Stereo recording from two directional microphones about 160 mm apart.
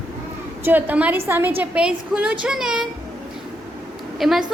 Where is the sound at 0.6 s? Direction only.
10° right (ahead or behind).